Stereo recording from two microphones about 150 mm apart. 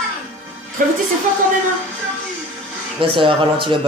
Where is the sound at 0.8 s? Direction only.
65° right (ahead or behind).